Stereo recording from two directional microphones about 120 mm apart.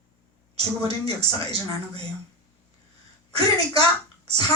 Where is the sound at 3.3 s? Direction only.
55° right (ahead or behind).